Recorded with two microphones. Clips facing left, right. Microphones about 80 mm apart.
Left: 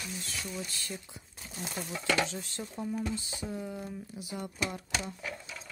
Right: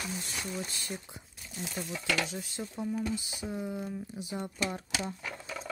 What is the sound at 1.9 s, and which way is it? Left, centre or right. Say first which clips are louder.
Speech: left 3 dB; centre.